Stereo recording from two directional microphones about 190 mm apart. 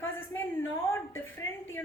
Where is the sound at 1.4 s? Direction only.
90° left.